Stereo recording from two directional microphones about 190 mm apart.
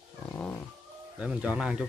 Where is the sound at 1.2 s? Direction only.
5° right (ahead or behind).